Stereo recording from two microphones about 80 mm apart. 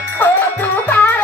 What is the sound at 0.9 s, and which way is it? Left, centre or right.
Music, left.